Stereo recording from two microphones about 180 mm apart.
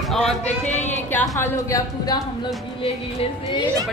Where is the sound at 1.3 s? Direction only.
15° left (ahead or behind).